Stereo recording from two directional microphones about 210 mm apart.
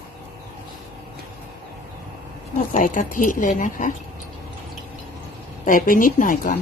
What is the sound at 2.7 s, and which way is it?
Speech, 40° left (ahead or behind).